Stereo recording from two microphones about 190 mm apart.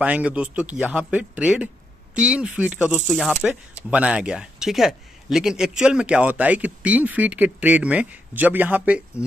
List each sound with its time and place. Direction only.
0.0 s speech: 5° right (ahead or behind)